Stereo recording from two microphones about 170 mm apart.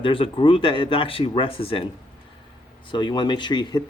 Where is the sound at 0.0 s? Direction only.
30° left (ahead or behind).